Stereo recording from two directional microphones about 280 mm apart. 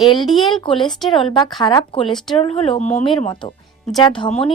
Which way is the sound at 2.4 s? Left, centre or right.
Left.